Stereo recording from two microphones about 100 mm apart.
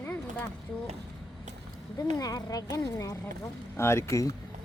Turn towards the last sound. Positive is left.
turn(degrees=30)  # may be behind; listen again after turning